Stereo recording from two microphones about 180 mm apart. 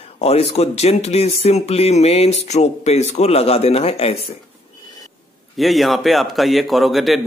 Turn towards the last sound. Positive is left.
turn(degrees=0)  # may be behind; listen again after turning